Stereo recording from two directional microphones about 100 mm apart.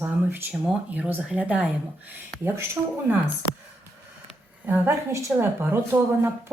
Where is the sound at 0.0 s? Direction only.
25° right (ahead or behind).